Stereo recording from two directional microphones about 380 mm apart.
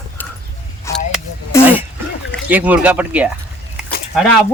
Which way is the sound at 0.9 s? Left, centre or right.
Centre.